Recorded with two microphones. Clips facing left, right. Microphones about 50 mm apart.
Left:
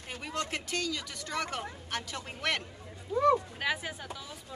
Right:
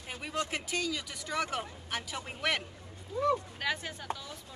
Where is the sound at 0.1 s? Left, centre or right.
Centre.